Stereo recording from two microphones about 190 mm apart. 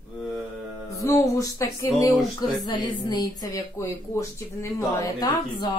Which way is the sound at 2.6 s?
20° left (ahead or behind).